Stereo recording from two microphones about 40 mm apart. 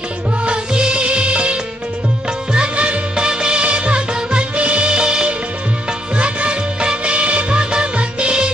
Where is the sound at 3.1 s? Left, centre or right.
Centre.